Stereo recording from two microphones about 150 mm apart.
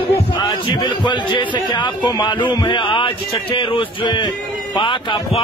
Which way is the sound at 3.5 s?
35° left (ahead or behind).